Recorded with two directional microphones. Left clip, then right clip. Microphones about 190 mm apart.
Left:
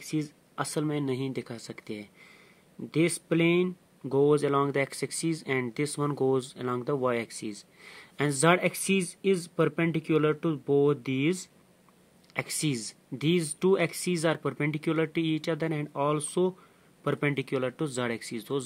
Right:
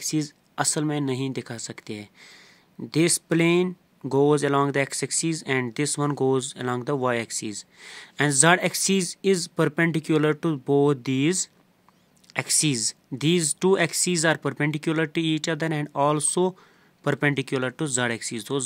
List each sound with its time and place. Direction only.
0.0 s speech: 30° right (ahead or behind)